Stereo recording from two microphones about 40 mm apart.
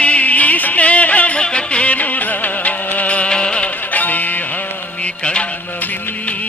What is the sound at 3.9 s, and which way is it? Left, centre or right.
Music, left.